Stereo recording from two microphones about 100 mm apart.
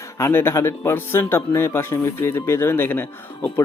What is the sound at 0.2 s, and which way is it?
Speech, 25° left (ahead or behind).